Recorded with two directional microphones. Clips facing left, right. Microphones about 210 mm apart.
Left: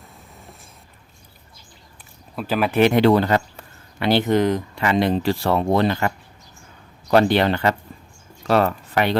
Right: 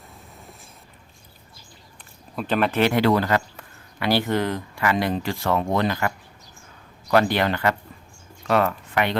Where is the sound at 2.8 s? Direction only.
20° left (ahead or behind).